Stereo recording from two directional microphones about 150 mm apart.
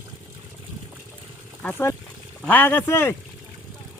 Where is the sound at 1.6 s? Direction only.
15° left (ahead or behind).